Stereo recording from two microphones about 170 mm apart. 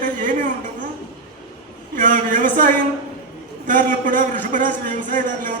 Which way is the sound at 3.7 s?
50° right (ahead or behind).